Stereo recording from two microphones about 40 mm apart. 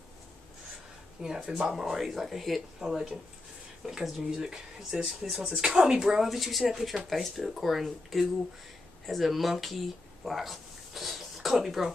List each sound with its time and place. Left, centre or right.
1.5 s speech: centre
1.9 s speech: centre
2.8 s speech: centre
6.2 s speech: centre